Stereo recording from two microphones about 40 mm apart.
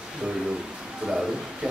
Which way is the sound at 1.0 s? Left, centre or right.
Centre.